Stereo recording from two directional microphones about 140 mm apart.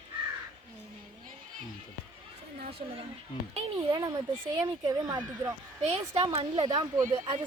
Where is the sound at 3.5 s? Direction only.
35° right (ahead or behind).